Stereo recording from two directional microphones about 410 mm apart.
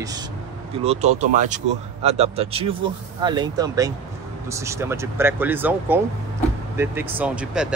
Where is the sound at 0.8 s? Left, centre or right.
Centre.